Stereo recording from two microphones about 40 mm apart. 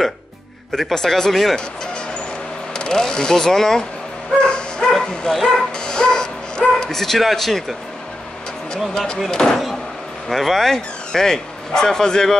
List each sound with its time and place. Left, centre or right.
0.7 s speech: centre
2.7 s speech: centre
4.5 s bow-wow: left
4.9 s speech: centre
5.9 s dog: left
7.0 s speech: centre
8.9 s speech: centre
10.2 s a man's voice: centre